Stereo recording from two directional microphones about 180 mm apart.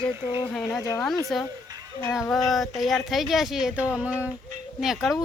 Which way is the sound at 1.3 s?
Centre (ahead or behind).